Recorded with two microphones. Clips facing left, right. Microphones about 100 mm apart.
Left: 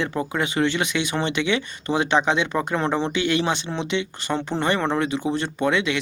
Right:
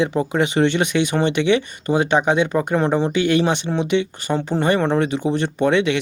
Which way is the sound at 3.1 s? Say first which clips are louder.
Right 5 dB; 45° right (ahead or behind).